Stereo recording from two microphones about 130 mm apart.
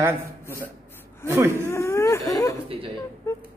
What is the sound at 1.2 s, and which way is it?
Speech, 20° right (ahead or behind).